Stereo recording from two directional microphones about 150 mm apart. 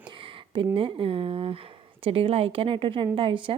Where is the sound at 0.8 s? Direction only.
35° right (ahead or behind).